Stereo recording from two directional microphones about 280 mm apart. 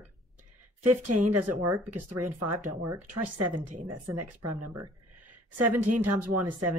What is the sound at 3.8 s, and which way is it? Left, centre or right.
Speech, right.